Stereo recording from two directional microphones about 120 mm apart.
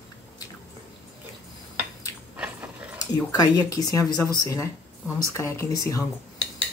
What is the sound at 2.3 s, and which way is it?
Biting, 10° right (ahead or behind).